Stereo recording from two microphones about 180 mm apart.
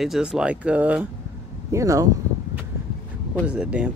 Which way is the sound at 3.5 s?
5° right (ahead or behind).